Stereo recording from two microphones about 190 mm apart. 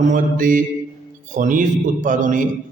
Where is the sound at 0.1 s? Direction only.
45° right (ahead or behind).